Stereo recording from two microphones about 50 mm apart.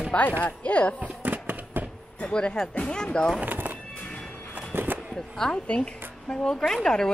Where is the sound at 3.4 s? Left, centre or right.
Right.